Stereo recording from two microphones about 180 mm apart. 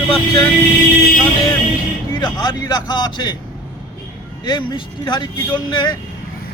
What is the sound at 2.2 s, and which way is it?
Speech, 20° left (ahead or behind).